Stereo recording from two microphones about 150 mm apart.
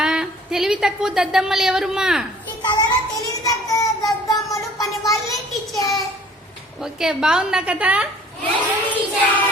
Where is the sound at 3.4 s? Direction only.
20° left (ahead or behind).